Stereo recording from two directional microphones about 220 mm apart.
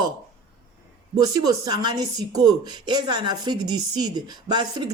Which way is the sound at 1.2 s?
15° right (ahead or behind).